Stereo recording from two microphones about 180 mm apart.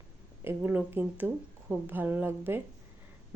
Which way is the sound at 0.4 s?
10° right (ahead or behind).